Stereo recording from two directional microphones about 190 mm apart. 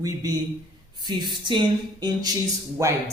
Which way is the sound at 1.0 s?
25° right (ahead or behind).